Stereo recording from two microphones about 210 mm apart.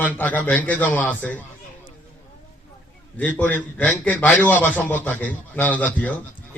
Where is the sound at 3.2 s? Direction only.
5° left (ahead or behind).